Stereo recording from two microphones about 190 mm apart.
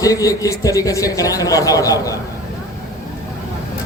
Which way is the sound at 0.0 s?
20° left (ahead or behind).